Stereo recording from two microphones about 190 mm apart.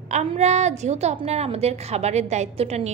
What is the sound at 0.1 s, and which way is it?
A woman's voice, 35° right (ahead or behind).